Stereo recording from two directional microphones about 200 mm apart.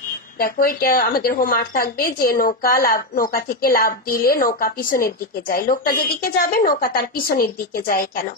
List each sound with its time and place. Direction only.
0.4 s a woman's voice: 45° left (ahead or behind)